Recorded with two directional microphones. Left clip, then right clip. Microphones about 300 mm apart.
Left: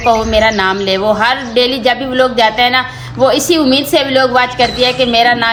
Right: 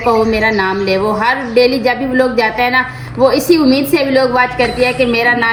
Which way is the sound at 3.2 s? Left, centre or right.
Left.